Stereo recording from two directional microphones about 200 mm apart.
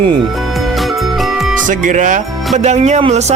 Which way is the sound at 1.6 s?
40° right (ahead or behind).